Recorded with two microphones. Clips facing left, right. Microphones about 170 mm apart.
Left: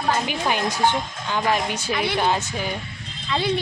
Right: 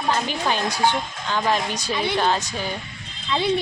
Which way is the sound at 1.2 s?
10° left (ahead or behind).